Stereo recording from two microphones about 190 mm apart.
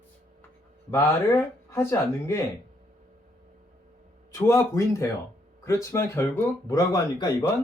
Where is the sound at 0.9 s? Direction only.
15° left (ahead or behind).